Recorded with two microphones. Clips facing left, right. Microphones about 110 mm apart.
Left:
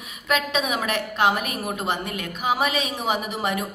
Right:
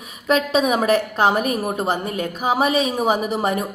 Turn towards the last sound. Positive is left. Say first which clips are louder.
# right 5 dB
turn(degrees=-40)  # may be behind; listen again after turning